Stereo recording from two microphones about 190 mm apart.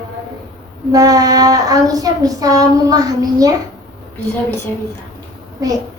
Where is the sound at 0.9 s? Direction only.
20° right (ahead or behind).